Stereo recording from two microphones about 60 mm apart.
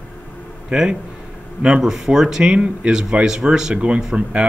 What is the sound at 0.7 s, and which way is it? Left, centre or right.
Speech, centre.